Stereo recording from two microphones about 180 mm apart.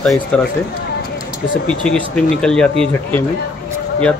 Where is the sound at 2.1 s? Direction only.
5° left (ahead or behind).